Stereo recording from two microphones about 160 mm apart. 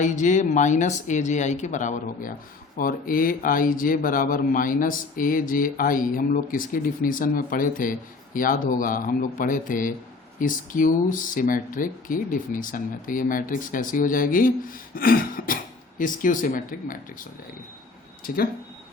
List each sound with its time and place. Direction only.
0.0 s speech: 50° left (ahead or behind)
2.7 s speech: 60° left (ahead or behind)